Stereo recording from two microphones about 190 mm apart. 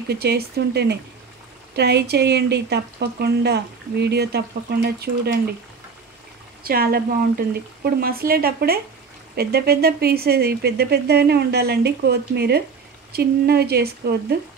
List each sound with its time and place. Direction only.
0.1 s speech: 60° right (ahead or behind)
6.6 s speech: 55° right (ahead or behind)